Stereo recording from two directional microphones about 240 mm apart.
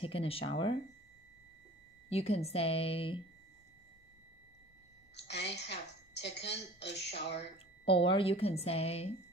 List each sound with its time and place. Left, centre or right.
0.0 s a woman's voice: left
2.0 s a woman's voice: left
5.1 s a woman's voice: left
7.3 s a woman's voice: left